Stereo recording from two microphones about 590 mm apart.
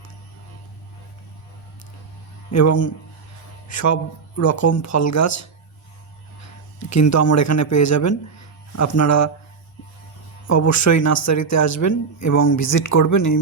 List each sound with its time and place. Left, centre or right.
2.5 s speech: left
6.7 s speech: left
10.4 s speech: left